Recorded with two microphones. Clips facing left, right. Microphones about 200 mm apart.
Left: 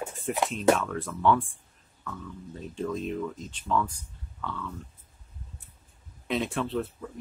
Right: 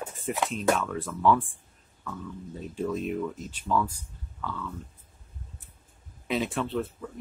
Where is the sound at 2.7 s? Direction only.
5° right (ahead or behind).